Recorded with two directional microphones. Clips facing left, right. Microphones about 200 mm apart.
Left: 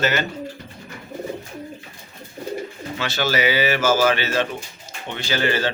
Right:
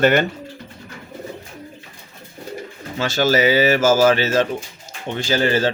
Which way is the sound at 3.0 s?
45° right (ahead or behind).